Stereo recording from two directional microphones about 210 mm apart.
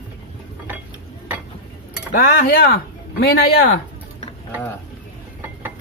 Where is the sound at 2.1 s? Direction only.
45° left (ahead or behind).